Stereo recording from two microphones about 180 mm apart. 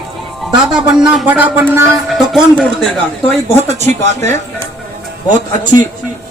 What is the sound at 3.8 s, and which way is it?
Speech, 40° right (ahead or behind).